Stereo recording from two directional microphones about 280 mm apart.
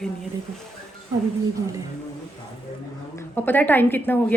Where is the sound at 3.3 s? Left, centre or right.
Centre.